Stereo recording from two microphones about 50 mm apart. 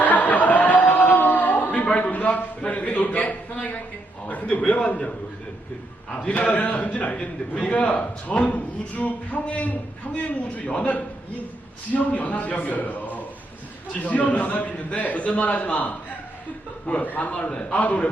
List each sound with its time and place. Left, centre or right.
0.0 s a sound: left
2.6 s a man's voice: left
6.1 s a man's voice: left